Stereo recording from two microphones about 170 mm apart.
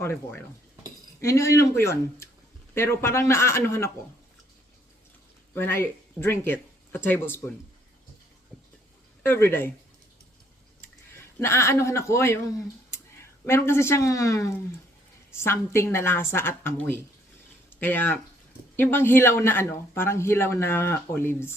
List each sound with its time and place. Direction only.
1.2 s speech: 20° left (ahead or behind)
5.5 s speech: 15° left (ahead or behind)
9.2 s speech: 15° left (ahead or behind)
11.3 s speech: 15° left (ahead or behind)
13.4 s speech: 15° left (ahead or behind)